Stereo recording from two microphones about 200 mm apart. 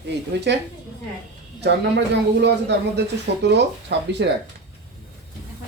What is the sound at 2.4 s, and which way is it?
Speech, 55° right (ahead or behind).